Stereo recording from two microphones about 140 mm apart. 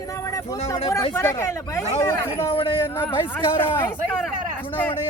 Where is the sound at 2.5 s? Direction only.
40° left (ahead or behind).